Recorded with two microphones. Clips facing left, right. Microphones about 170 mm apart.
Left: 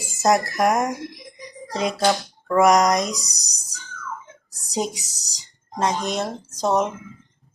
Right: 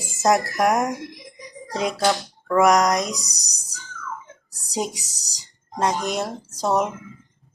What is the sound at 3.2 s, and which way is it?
Speech, 65° right (ahead or behind).